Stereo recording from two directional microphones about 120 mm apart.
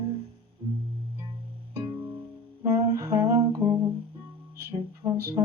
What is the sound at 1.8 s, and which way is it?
Music, 35° right (ahead or behind).